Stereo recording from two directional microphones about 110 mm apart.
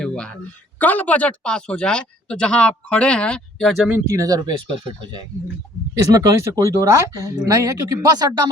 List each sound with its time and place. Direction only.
0.0 s a sound: 5° left (ahead or behind)
0.8 s speech: 15° left (ahead or behind)
4.0 s speech: 30° right (ahead or behind)
6.1 s speech: 30° right (ahead or behind)